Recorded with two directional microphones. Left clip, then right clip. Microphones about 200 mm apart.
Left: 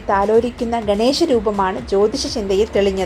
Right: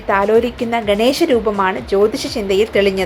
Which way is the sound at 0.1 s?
15° right (ahead or behind).